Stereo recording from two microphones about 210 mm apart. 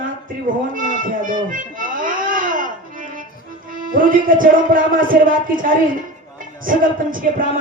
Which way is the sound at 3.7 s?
40° right (ahead or behind).